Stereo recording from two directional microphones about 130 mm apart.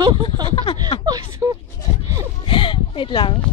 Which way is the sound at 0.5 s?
40° left (ahead or behind).